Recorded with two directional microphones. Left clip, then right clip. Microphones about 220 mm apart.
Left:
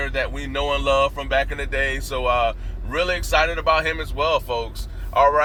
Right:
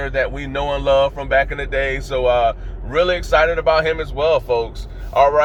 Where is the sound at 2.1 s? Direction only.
15° right (ahead or behind).